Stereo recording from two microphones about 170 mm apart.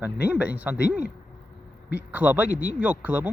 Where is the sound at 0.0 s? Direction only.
10° right (ahead or behind).